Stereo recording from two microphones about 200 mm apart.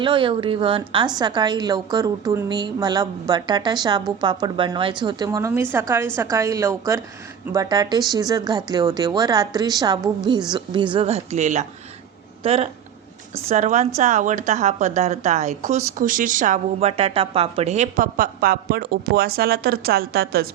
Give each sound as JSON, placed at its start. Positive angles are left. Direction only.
{"t": 0.0, "sound": "a woman's voice", "side_deg": -25}